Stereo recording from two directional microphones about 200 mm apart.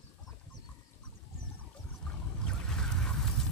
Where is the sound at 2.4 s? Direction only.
Centre (ahead or behind).